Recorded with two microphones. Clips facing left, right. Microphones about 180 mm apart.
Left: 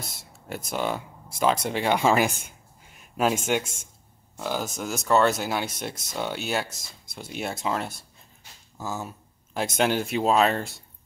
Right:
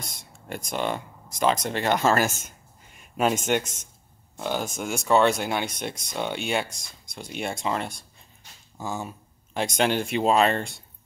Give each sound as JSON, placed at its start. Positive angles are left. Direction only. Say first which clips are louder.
{"t": 0.0, "sound": "speech", "louder": "left 1 dB", "side_deg": 5}
{"t": 3.0, "sound": "speech", "louder": "even", "side_deg": 0}